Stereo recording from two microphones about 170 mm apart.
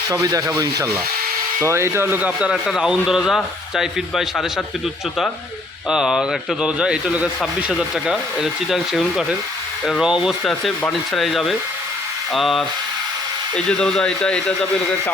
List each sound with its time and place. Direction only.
0.1 s speech: 20° right (ahead or behind); by 4.6 s centre (ahead or behind)
5.9 s speech: 5° right (ahead or behind)
13.7 s speech: 5° left (ahead or behind)